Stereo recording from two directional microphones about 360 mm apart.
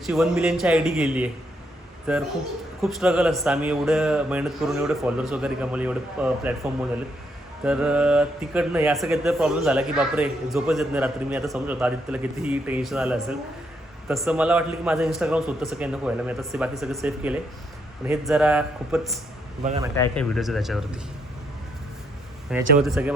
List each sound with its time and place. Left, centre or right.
0.0 s speech: centre
7.6 s speech: centre
19.6 s speech: centre
20.0 s speech: centre
22.4 s speech: centre